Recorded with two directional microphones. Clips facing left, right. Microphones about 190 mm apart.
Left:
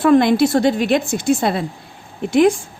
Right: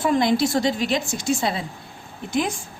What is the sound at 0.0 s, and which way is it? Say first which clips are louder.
A woman's voice: left 7 dB; 60° left (ahead or behind).